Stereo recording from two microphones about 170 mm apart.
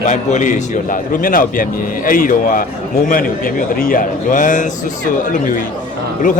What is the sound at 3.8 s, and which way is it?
Speech, 55° left (ahead or behind).